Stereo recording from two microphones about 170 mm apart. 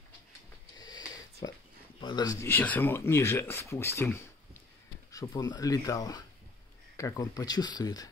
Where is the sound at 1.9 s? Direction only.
25° left (ahead or behind).